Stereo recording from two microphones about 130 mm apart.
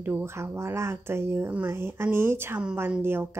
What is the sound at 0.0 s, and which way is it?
Speech, 15° right (ahead or behind).